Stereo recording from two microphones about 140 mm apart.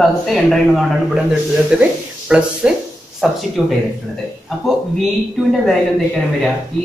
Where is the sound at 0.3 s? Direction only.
Centre (ahead or behind).